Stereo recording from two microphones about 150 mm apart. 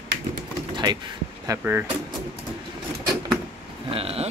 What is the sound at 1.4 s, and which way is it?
Speech, 15° right (ahead or behind).